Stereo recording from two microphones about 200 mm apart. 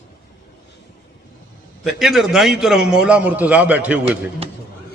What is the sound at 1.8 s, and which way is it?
A man's voice, centre (ahead or behind).